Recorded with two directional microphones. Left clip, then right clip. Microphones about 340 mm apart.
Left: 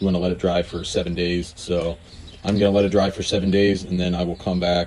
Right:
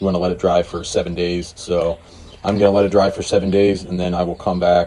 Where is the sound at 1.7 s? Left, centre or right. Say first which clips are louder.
Right 5 dB; centre.